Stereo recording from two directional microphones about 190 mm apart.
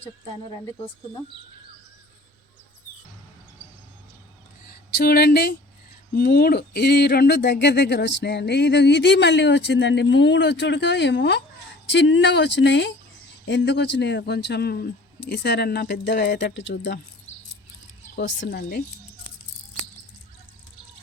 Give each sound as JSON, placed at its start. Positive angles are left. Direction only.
{"t": 4.9, "sound": "speech", "side_deg": 55}
{"t": 18.2, "sound": "speech", "side_deg": 65}